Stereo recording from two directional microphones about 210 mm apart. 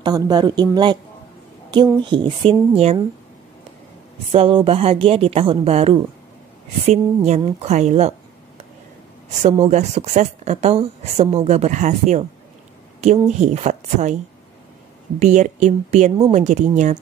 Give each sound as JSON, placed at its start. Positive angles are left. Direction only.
{"t": 0.0, "sound": "a woman's voice", "side_deg": -20}
{"t": 4.3, "sound": "a woman's voice", "side_deg": -25}
{"t": 9.5, "sound": "a woman's voice", "side_deg": -30}
{"t": 13.3, "sound": "a woman's voice", "side_deg": -35}
{"t": 15.1, "sound": "a woman's voice", "side_deg": -35}